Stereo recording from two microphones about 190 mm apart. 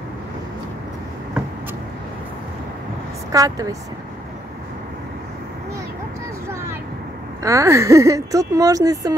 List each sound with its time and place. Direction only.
3.3 s speech: 20° right (ahead or behind)
7.4 s speech: 15° right (ahead or behind)